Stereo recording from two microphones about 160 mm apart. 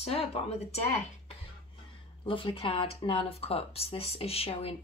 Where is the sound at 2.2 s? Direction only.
35° left (ahead or behind).